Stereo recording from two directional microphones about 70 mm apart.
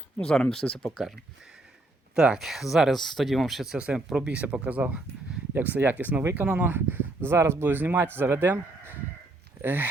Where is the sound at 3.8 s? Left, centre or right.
Centre.